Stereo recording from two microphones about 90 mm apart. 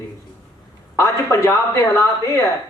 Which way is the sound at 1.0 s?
30° left (ahead or behind).